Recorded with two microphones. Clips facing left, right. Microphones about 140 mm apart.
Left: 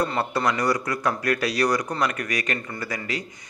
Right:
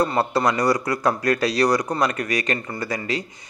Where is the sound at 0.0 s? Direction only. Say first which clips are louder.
Right 4 dB; 35° right (ahead or behind).